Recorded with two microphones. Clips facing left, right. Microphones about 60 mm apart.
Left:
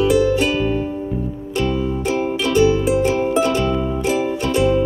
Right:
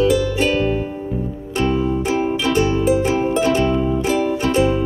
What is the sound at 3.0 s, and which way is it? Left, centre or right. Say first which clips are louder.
Music: even; right.